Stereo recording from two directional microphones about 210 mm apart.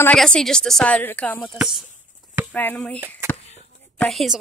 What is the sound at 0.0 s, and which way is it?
A woman's voice, 5° left (ahead or behind).